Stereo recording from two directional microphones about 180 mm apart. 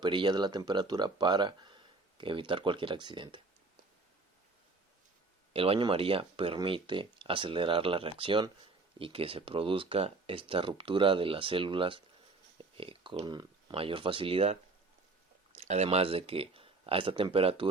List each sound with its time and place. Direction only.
0.0 s speech: 25° right (ahead or behind)
5.5 s speech: 30° right (ahead or behind)